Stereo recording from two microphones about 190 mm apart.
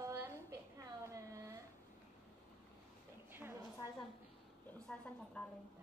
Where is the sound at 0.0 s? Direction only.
15° right (ahead or behind).